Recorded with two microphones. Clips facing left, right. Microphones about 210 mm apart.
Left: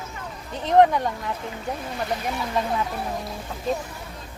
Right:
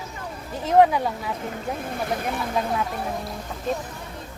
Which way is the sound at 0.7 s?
5° right (ahead or behind).